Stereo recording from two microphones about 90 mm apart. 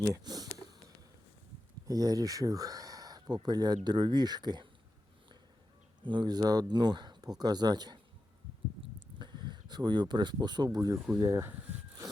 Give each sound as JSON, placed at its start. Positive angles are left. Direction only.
{"t": 0.0, "sound": "speech", "side_deg": -40}
{"t": 1.9, "sound": "speech", "side_deg": -45}
{"t": 6.1, "sound": "speech", "side_deg": -55}
{"t": 9.1, "sound": "speech", "side_deg": -60}
{"t": 10.8, "sound": "speech", "side_deg": -40}